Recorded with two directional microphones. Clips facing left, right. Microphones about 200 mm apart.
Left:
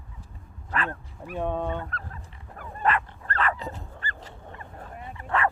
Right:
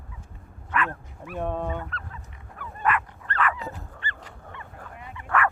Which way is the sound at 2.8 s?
30° left (ahead or behind).